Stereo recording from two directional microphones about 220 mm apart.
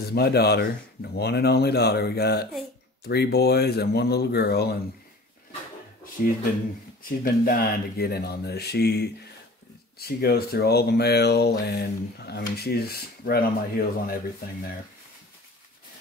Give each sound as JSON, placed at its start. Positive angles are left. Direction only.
{"t": 0.1, "sound": "speech", "side_deg": 45}
{"t": 6.2, "sound": "speech", "side_deg": 40}